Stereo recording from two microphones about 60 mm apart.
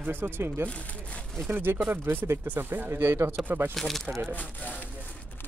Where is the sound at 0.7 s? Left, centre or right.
Centre.